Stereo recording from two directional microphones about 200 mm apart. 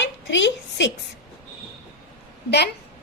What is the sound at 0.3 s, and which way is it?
Speech, 65° left (ahead or behind).